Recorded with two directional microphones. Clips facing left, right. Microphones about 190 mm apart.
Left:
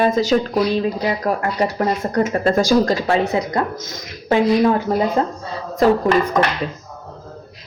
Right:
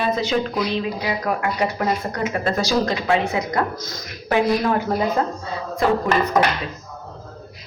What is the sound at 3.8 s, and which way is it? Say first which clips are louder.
A man's voice: left 1 dB; 20° left (ahead or behind).